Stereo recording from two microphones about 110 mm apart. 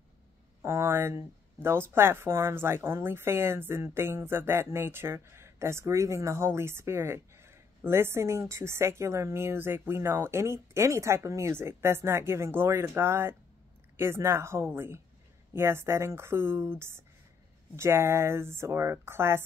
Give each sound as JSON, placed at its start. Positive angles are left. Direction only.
{"t": 0.6, "sound": "speech", "side_deg": -25}